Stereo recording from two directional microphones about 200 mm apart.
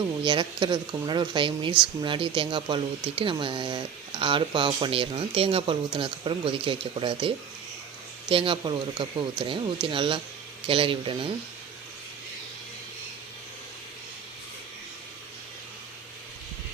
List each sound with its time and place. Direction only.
0.3 s speech: 25° right (ahead or behind)